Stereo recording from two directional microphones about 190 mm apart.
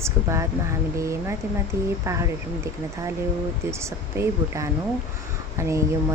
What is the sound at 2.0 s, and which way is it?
Speech, 15° right (ahead or behind).